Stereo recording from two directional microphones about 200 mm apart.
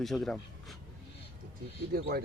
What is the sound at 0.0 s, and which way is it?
Speech, centre (ahead or behind).